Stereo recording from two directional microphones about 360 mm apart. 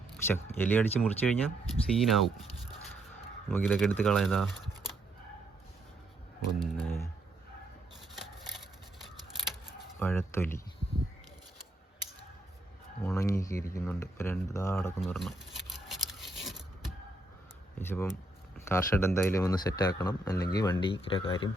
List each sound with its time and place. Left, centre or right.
0.3 s speech: centre
3.5 s speech: centre
6.8 s a sound: centre
10.0 s speech: centre
13.1 s speech: centre
17.7 s speech: centre